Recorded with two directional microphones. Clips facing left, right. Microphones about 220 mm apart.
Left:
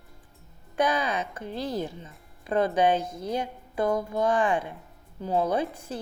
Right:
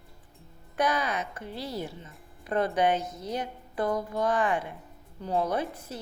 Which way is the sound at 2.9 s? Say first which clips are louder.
Left 3 dB; 30° left (ahead or behind).